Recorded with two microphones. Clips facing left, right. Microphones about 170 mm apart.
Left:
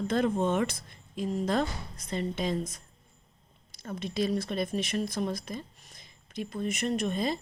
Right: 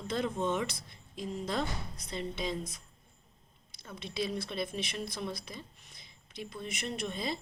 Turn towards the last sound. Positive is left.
turn(degrees=50)  # may be behind; listen again after turning